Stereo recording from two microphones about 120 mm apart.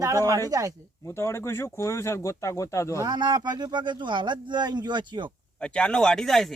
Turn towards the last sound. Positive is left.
turn(degrees=5)  # may be behind; listen again after turning